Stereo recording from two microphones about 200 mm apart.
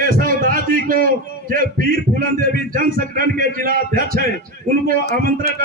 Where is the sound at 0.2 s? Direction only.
45° right (ahead or behind).